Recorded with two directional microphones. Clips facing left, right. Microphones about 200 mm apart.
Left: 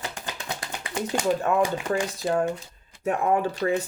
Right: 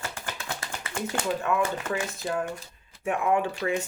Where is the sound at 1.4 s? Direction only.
35° left (ahead or behind).